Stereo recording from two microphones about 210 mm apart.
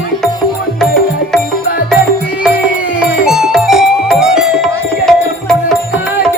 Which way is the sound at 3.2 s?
Centre (ahead or behind).